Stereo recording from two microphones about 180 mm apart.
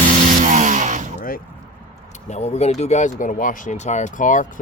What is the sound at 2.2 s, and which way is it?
Speech, 40° left (ahead or behind).